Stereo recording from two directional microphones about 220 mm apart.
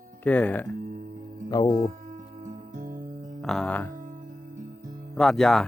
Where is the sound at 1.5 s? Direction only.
20° left (ahead or behind).